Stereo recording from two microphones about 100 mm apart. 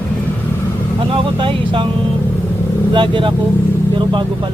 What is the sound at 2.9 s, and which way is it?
Speech, 55° right (ahead or behind).